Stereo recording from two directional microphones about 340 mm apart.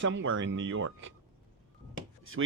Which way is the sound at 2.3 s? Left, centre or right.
Right.